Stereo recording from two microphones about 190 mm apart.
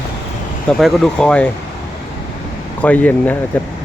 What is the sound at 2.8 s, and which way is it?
Speech, 10° left (ahead or behind).